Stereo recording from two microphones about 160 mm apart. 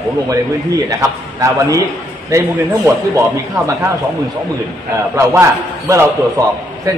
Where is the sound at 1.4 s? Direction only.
20° right (ahead or behind).